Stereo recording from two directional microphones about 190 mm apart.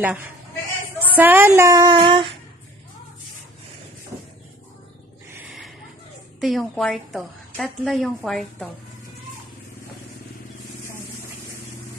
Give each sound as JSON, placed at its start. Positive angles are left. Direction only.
{"t": 0.0, "sound": "speech", "side_deg": -10}
{"t": 5.3, "sound": "a sound", "side_deg": -10}
{"t": 6.4, "sound": "a woman's voice", "side_deg": 0}